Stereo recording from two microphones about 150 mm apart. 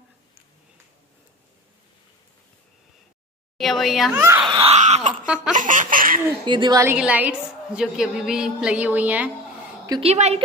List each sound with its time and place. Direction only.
3.5 s speech: centre (ahead or behind)
4.1 s a woman's voice: 15° right (ahead or behind)
4.5 s a sound: 35° right (ahead or behind)
4.7 s a woman's voice: 50° right (ahead or behind)
5.2 s a woman's voice: 5° right (ahead or behind)
5.5 s baby laughter: 60° right (ahead or behind)
6.4 s a woman's voice: 30° right (ahead or behind)
6.9 s a woman's voice: 10° right (ahead or behind)
10.0 s a woman's voice: 45° right (ahead or behind)